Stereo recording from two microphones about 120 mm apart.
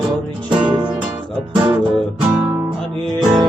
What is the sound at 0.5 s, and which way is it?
Music, 40° right (ahead or behind).